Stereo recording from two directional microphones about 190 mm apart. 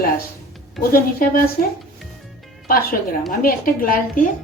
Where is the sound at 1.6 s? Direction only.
45° left (ahead or behind).